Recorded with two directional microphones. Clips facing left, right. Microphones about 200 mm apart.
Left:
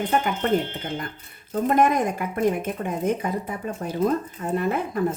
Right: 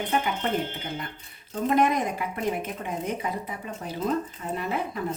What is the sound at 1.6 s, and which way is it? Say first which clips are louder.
A woman's voice: left 3 dB; 50° left (ahead or behind).